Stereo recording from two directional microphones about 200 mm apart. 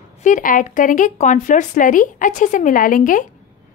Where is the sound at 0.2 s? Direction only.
40° left (ahead or behind).